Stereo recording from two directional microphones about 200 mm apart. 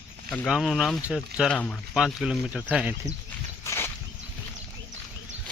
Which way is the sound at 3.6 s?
10° left (ahead or behind).